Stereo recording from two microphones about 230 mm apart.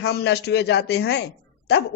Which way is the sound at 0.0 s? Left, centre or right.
Left.